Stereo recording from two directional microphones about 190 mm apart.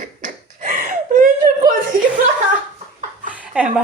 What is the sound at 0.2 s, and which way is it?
Slap, 45° right (ahead or behind).